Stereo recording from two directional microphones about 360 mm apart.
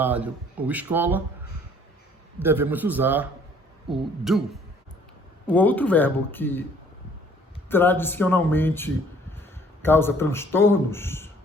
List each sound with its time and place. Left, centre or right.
0.0 s speech: centre
2.4 s speech: centre
5.5 s speech: centre
7.7 s a man's voice: centre